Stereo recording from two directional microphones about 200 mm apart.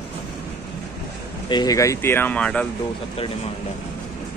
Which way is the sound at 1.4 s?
20° left (ahead or behind).